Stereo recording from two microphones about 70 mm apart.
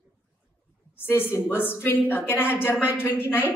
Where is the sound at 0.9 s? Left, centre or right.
Left.